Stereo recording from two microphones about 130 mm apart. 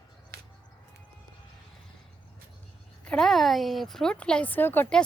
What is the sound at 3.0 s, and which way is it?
A woman's voice, 5° left (ahead or behind).